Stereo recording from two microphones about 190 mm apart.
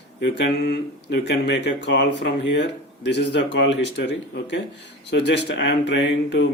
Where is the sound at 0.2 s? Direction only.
65° left (ahead or behind).